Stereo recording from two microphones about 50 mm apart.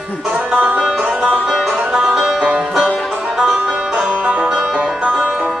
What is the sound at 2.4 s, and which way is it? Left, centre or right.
Music, right.